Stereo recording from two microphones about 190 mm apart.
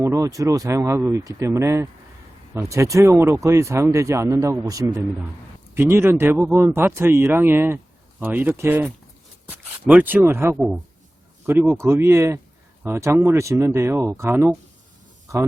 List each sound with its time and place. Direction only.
0.0 s speech: 15° right (ahead or behind)
10.5 s speech: centre (ahead or behind)